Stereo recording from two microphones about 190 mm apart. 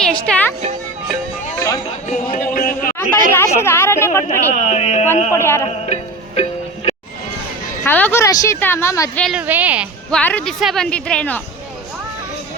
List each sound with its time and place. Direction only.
0.0 s speech: 5° left (ahead or behind)
1.5 s a sound: 20° left (ahead or behind)
2.0 s a sound: 45° left (ahead or behind)
3.1 s speech: 45° right (ahead or behind)
3.3 s a woman's voice: 15° left (ahead or behind)
4.3 s speech: 35° left (ahead or behind)
5.3 s a woman's voice: 15° left (ahead or behind)
5.6 s music: 35° left (ahead or behind)
7.9 s a woman's voice: 10° left (ahead or behind)
9.2 s a woman's voice: 5° right (ahead or behind)
10.1 s speech: 5° left (ahead or behind)